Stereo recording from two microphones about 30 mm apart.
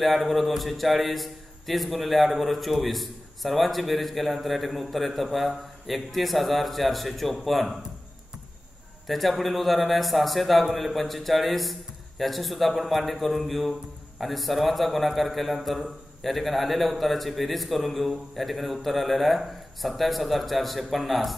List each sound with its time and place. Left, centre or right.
0.0 s a man's voice: centre
9.0 s a man's voice: centre